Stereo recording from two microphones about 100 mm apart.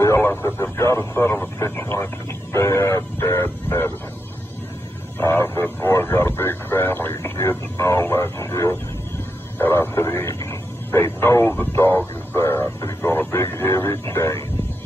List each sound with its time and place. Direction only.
0.0 s speech: 25° left (ahead or behind)
5.2 s radio: 25° left (ahead or behind)
7.3 s a sound: 30° left (ahead or behind)
9.6 s radio: 25° left (ahead or behind)